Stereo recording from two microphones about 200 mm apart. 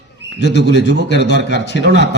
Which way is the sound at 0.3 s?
60° left (ahead or behind).